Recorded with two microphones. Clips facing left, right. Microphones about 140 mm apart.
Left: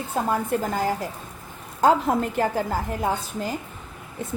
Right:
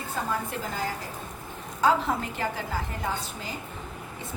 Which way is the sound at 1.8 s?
45° left (ahead or behind).